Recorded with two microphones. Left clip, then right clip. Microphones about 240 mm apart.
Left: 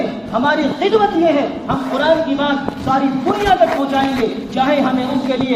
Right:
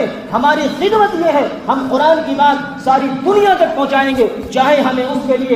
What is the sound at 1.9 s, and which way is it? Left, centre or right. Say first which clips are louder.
A man's voice: right 2 dB; right.